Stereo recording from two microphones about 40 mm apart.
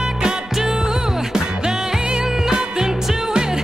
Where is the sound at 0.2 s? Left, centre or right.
Centre.